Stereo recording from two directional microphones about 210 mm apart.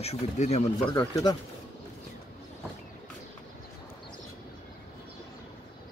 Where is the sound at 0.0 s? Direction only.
30° left (ahead or behind).